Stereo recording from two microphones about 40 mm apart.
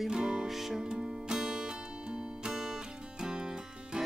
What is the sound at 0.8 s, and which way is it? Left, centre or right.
Music, centre.